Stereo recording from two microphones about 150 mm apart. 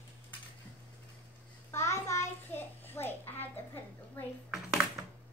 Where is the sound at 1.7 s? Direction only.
20° left (ahead or behind).